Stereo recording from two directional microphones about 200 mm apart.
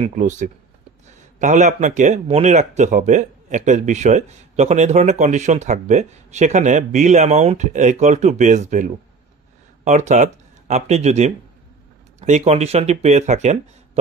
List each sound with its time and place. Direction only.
0.0 s speech: 40° right (ahead or behind)